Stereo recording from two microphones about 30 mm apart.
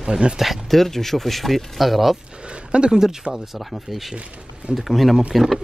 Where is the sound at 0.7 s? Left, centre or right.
Centre.